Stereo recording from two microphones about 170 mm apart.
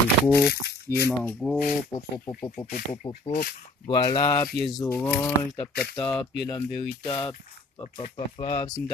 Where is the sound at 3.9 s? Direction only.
25° left (ahead or behind); by 6.3 s 10° left (ahead or behind).